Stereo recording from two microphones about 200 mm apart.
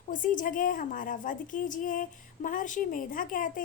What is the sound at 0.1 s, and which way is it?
A woman's voice, 40° left (ahead or behind).